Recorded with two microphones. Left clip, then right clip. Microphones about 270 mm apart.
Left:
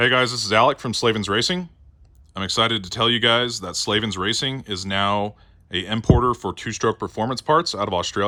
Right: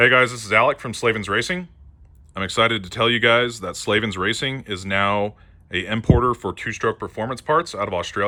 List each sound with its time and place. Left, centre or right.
0.0 s speech: centre